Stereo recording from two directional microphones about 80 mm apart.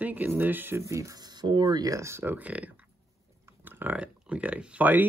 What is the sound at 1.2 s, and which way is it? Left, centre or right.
Speech, right.